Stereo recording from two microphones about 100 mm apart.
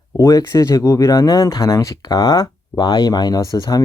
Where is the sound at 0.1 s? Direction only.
35° left (ahead or behind).